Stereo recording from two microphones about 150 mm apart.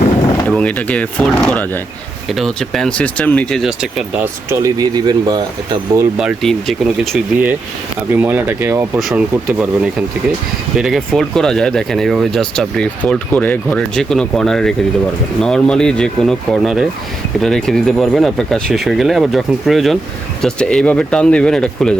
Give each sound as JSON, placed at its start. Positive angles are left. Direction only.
{"t": 0.4, "sound": "speech", "side_deg": 10}
{"t": 4.4, "sound": "speech", "side_deg": -25}
{"t": 6.1, "sound": "speech", "side_deg": 0}
{"t": 8.1, "sound": "speech", "side_deg": -15}
{"t": 9.0, "sound": "speech", "side_deg": 0}